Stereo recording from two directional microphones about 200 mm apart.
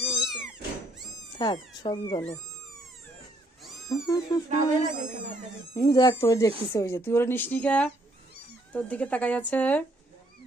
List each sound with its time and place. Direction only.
0.2 s cat: 5° right (ahead or behind)
1.4 s speech: 25° left (ahead or behind)
3.8 s speech: 15° left (ahead or behind)
4.4 s speech: 35° right (ahead or behind)
5.7 s speech: 20° left (ahead or behind)